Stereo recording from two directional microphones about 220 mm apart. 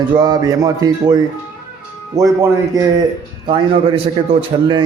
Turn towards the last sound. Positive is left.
turn(degrees=-25)  # may be behind; listen again after turning